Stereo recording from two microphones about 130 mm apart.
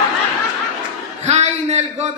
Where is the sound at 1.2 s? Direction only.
55° right (ahead or behind).